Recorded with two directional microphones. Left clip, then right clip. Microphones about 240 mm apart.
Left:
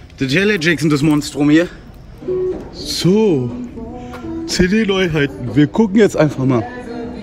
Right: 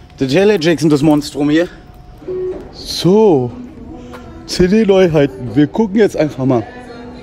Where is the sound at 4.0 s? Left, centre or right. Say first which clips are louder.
Left 6 dB; centre.